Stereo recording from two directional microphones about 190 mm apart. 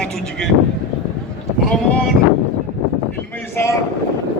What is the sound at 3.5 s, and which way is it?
Speech, 15° left (ahead or behind).